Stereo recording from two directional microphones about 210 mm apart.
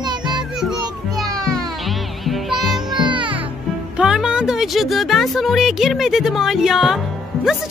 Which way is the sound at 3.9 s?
5° right (ahead or behind).